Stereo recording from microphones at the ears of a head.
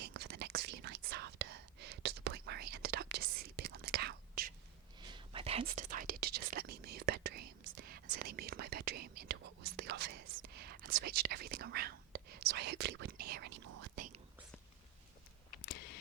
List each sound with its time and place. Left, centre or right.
0.0 s whispering: right
15.4 s camera: left